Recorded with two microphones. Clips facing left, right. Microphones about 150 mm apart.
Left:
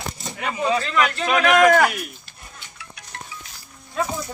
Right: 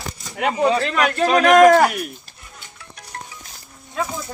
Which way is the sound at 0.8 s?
60° right (ahead or behind).